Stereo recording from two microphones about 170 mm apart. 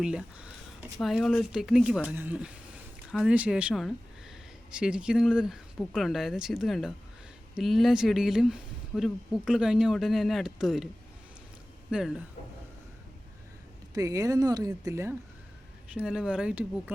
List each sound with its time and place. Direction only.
0.0 s a sound: 5° right (ahead or behind)
0.9 s speech: centre (ahead or behind)
11.9 s speech: 5° right (ahead or behind)
13.9 s speech: 20° right (ahead or behind)
16.0 s speech: 5° right (ahead or behind)